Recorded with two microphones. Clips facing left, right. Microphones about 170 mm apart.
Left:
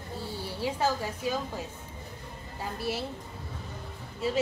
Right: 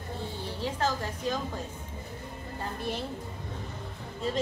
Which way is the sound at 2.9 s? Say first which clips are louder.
Left 2 dB; 5° left (ahead or behind).